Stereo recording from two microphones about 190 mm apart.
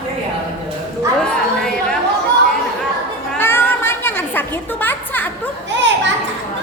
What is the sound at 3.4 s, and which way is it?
Music, 10° left (ahead or behind).